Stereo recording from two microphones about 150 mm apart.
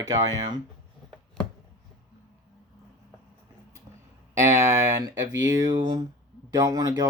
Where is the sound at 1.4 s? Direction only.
5° left (ahead or behind).